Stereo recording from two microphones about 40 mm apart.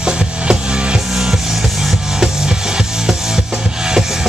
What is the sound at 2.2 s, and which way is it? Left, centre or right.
Music, centre.